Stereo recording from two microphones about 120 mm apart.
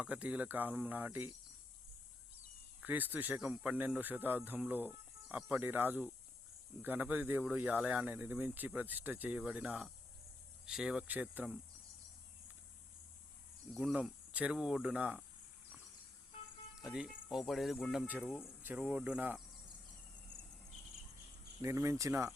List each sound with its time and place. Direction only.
0.0 s speech: 10° right (ahead or behind)
2.8 s speech: 15° right (ahead or behind)
13.7 s speech: 5° right (ahead or behind)
16.8 s speech: 5° right (ahead or behind)
18.0 s speech: 15° right (ahead or behind)
18.3 s speech: 5° right (ahead or behind)
18.6 s speech: 15° right (ahead or behind)
21.6 s speech: 25° right (ahead or behind)